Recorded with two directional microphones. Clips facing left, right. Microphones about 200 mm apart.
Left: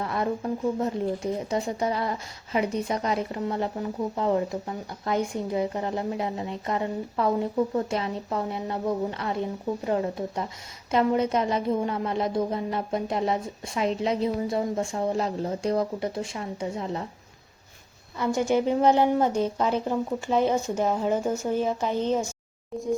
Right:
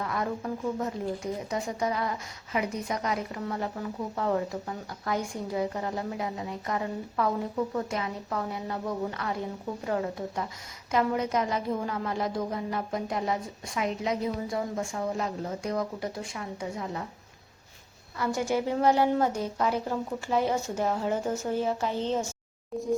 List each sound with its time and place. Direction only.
0.0 s speech: 30° left (ahead or behind)
18.2 s a woman's voice: 20° left (ahead or behind)